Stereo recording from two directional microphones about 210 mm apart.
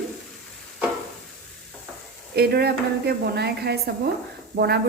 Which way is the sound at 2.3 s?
50° right (ahead or behind).